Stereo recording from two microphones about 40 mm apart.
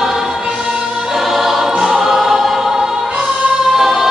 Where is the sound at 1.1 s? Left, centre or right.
Centre.